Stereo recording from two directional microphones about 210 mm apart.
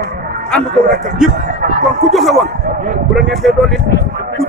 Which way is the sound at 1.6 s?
45° right (ahead or behind).